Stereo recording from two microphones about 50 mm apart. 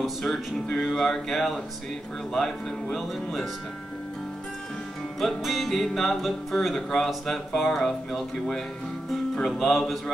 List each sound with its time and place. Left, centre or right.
0.0 s music: centre
0.7 s speech: centre
5.2 s speech: centre